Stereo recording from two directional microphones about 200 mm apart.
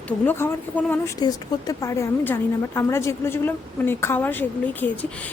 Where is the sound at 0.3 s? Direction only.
10° left (ahead or behind).